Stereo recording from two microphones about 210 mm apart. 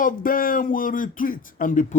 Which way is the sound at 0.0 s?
40° left (ahead or behind).